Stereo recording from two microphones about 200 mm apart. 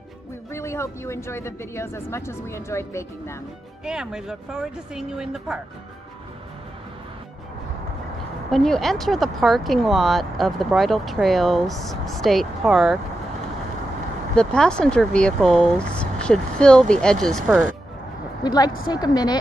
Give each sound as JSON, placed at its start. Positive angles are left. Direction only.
{"t": 0.5, "sound": "speech", "side_deg": 15}
{"t": 3.8, "sound": "speech", "side_deg": -5}
{"t": 8.5, "sound": "speech", "side_deg": 0}
{"t": 14.3, "sound": "speech", "side_deg": 5}
{"t": 18.4, "sound": "a woman's voice", "side_deg": 20}